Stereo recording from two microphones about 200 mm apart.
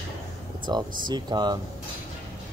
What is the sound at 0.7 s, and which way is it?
Speech, 20° right (ahead or behind).